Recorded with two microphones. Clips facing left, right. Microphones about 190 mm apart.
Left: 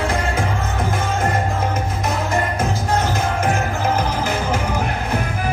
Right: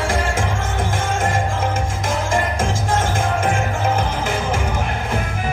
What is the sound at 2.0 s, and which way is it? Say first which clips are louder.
Music: right 1 dB; 90° right.